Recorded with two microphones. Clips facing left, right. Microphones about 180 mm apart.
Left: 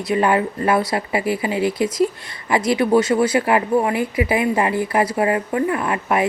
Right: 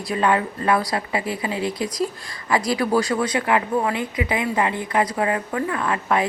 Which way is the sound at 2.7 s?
25° left (ahead or behind).